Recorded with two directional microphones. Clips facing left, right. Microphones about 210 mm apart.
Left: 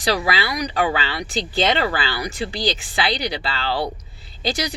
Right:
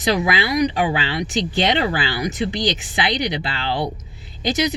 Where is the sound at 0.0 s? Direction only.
20° right (ahead or behind).